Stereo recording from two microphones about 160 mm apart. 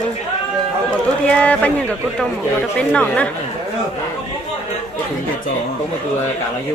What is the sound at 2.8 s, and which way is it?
Speech, 5° left (ahead or behind).